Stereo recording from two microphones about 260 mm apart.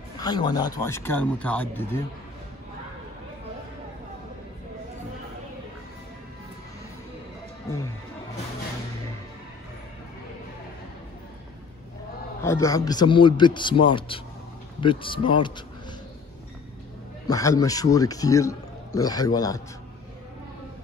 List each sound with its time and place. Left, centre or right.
0.2 s speech: centre
7.7 s speech: centre
12.4 s speech: centre
17.3 s speech: centre